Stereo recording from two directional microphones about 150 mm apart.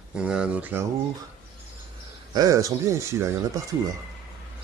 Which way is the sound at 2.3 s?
25° right (ahead or behind).